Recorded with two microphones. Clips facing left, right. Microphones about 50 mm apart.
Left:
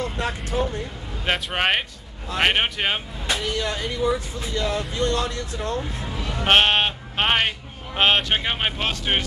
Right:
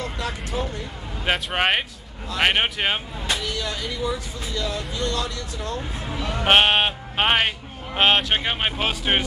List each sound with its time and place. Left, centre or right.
0.2 s speech: left
1.2 s speech: centre
3.3 s speech: left
6.4 s speech: centre